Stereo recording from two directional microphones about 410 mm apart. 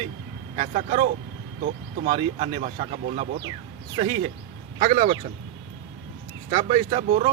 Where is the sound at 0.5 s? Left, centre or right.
Centre.